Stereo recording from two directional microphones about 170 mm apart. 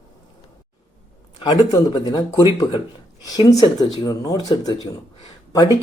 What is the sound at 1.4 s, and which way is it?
Speech, 25° left (ahead or behind).